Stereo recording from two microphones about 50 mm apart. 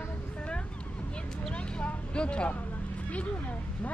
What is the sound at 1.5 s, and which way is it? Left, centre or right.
Vehicle, left.